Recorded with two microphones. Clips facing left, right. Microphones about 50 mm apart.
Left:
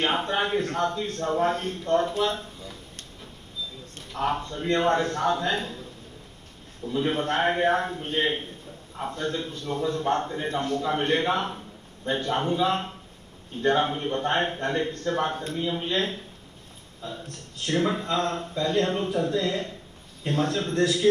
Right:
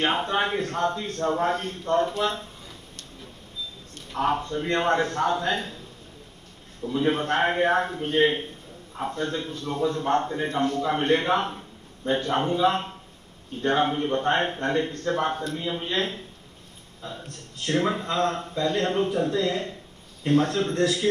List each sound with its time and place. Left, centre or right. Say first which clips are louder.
0.0 s a man's voice: right 1 dB; right
4.1 s a man's voice: right 3 dB; right
6.9 s a man's voice: right 2 dB; right
17.6 s a man's voice: right 1 dB; right